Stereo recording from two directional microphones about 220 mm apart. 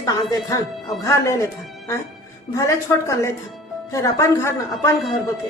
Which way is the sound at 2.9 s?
10° left (ahead or behind).